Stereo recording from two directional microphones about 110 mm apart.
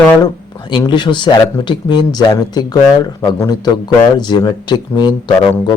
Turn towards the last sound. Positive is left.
turn(degrees=45)  # may be behind; listen again after turning